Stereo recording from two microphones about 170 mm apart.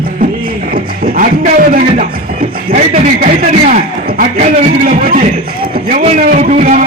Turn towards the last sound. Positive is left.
turn(degrees=-45)  # may be behind; listen again after turning